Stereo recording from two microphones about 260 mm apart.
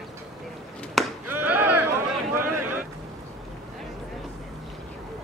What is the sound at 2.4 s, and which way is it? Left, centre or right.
Boat, right.